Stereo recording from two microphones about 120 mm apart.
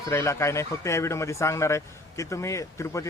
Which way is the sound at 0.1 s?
25° left (ahead or behind).